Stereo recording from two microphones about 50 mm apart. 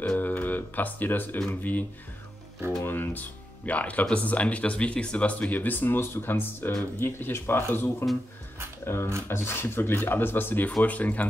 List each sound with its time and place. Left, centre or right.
0.2 s music: left
1.5 s speech: left
5.9 s speech: left
8.8 s speech: left